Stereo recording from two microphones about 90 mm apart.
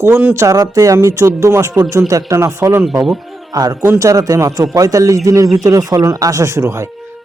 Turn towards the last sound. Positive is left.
turn(degrees=-30)  # may be behind; listen again after turning